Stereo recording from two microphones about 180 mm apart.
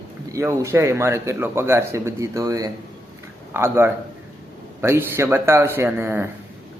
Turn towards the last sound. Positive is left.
turn(degrees=-15)  # may be behind; listen again after turning